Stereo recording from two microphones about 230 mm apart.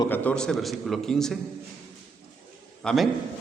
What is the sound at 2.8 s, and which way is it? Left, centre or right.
Speech, centre.